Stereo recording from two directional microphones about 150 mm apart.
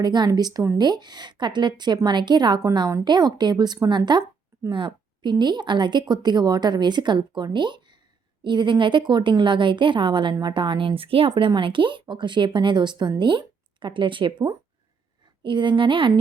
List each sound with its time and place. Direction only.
0.0 s a woman's voice: 30° right (ahead or behind)